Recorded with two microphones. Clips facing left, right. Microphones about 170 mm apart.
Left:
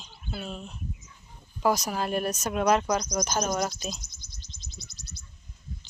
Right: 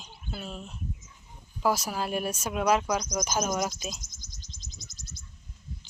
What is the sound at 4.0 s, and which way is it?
Bird, 45° right (ahead or behind).